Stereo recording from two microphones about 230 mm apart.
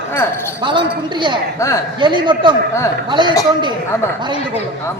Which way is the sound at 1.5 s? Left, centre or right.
Centre.